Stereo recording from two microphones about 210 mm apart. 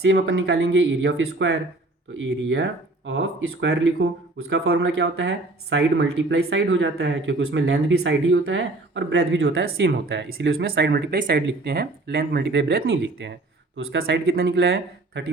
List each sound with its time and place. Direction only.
0.0 s speech: 60° right (ahead or behind)
12.9 s speech: 60° right (ahead or behind)